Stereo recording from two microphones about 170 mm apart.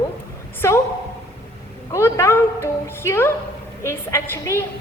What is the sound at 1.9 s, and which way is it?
A woman's voice, 15° left (ahead or behind).